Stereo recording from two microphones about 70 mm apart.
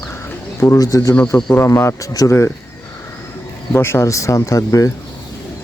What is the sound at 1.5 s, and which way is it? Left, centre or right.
Speech, left.